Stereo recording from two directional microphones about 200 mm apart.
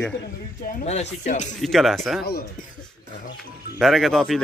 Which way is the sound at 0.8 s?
35° left (ahead or behind).